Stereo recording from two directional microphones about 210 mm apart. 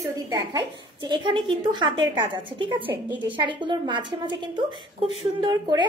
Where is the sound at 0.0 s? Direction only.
20° right (ahead or behind).